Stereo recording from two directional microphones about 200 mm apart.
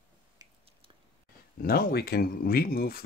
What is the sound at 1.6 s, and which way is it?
Speech, 50° left (ahead or behind).